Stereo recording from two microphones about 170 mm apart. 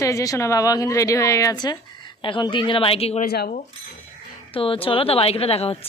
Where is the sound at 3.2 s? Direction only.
60° left (ahead or behind).